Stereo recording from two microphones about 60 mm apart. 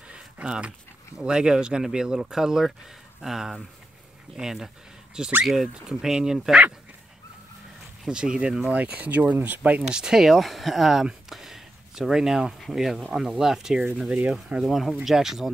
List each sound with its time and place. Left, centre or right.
0.1 s speech: centre
8.1 s speech: centre
9.8 s speech: centre
11.2 s a sound: centre
12.5 s speech: centre